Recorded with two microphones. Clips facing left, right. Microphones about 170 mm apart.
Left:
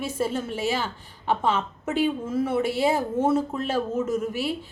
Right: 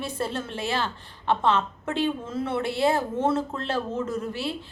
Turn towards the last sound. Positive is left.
turn(degrees=10)  # may be behind; listen again after turning